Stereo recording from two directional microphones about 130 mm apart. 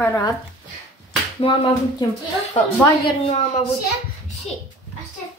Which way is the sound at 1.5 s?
45° left (ahead or behind).